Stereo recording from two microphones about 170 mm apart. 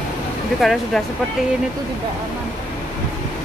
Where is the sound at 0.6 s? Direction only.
Centre (ahead or behind).